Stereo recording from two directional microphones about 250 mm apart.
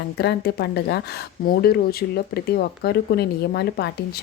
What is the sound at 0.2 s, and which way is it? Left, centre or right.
Speech, left.